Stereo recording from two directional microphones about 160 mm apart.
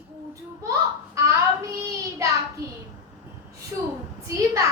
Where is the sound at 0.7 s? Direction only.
20° right (ahead or behind).